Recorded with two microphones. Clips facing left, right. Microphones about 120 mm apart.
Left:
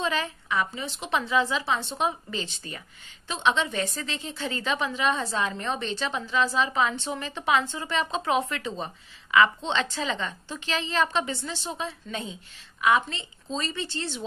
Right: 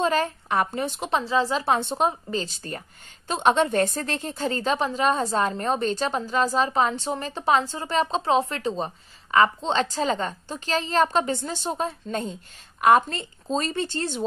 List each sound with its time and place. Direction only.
0.0 s a woman's voice: 45° right (ahead or behind)
1.2 s a woman's voice: 35° right (ahead or behind)
1.6 s a woman's voice: 50° right (ahead or behind)